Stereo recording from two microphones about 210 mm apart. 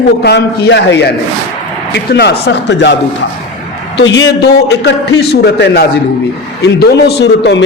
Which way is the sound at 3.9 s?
60° left (ahead or behind).